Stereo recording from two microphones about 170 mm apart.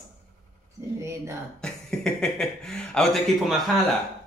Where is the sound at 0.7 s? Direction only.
15° right (ahead or behind).